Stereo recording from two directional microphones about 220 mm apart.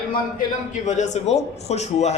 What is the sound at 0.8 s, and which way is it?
A man's voice, 35° left (ahead or behind).